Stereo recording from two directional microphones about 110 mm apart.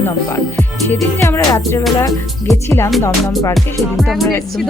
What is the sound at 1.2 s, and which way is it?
Speech, 25° left (ahead or behind).